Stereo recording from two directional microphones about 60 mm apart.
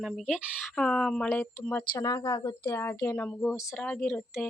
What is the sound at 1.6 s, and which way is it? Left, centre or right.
Speech, left.